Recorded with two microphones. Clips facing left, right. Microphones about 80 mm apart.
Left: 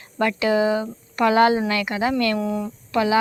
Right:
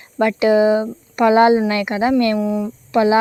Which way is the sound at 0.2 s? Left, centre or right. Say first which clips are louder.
Right 6 dB; right.